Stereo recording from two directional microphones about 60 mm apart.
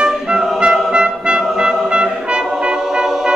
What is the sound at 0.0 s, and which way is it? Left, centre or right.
Music, centre.